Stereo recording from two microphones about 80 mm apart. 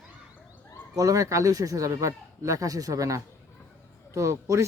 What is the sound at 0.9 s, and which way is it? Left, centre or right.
Speech, right.